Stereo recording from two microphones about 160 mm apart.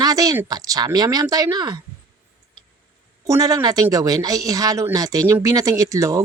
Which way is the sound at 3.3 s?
20° right (ahead or behind).